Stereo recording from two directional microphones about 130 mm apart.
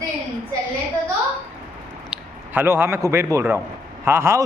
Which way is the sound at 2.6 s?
20° right (ahead or behind).